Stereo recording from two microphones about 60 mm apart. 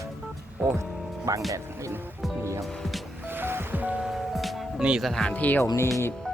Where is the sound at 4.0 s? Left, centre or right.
Centre.